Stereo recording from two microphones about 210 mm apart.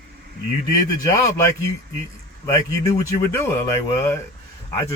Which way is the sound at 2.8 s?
15° left (ahead or behind).